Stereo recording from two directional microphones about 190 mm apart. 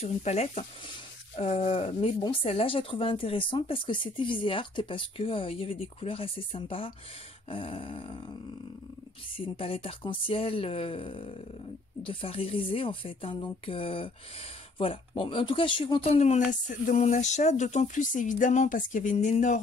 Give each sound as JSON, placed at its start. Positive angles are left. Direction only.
{"t": 0.0, "sound": "speech", "side_deg": 35}
{"t": 9.6, "sound": "speech", "side_deg": 30}